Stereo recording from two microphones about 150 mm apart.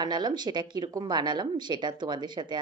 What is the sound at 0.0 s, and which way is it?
Speech, 30° right (ahead or behind).